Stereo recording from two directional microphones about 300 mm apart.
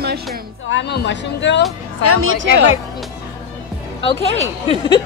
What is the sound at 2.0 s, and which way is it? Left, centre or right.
Speech, right.